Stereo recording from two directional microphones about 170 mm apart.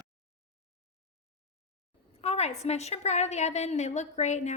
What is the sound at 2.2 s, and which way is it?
A woman's voice, 40° left (ahead or behind).